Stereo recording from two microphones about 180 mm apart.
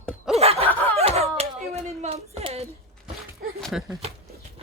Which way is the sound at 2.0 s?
35° right (ahead or behind).